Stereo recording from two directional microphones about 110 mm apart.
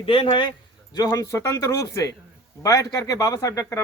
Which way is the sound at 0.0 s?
55° left (ahead or behind).